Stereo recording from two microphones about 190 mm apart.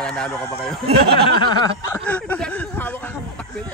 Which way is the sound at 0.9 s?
55° right (ahead or behind).